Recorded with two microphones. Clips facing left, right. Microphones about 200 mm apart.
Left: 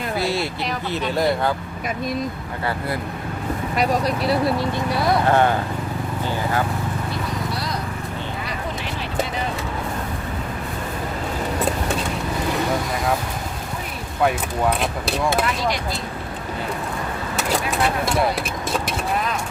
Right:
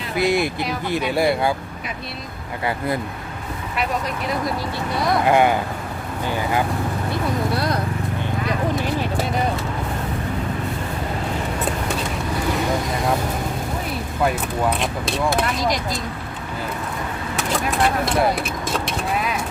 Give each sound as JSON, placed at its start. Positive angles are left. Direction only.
{"t": 0.2, "sound": "speech", "side_deg": -15}
{"t": 3.8, "sound": "speech", "side_deg": 35}
{"t": 5.2, "sound": "speech", "side_deg": -15}
{"t": 7.5, "sound": "horse", "side_deg": -55}
{"t": 17.8, "sound": "speech", "side_deg": 0}
{"t": 18.9, "sound": "vehicle", "side_deg": -5}